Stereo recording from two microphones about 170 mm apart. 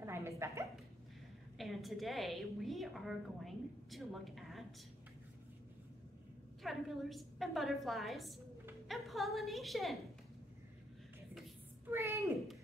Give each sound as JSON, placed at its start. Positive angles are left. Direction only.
{"t": 0.0, "sound": "a sound", "side_deg": -15}
{"t": 1.6, "sound": "a woman's voice", "side_deg": 0}
{"t": 6.6, "sound": "a woman's voice", "side_deg": 0}
{"t": 11.9, "sound": "speech", "side_deg": -15}